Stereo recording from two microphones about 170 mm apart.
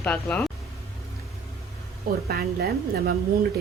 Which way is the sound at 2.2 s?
65° right (ahead or behind).